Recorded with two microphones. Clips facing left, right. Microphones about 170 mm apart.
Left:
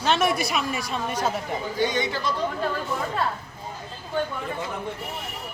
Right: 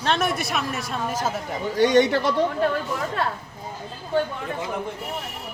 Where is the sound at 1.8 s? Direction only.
70° right (ahead or behind).